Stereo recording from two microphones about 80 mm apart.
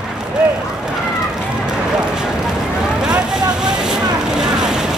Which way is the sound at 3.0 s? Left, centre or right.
Centre.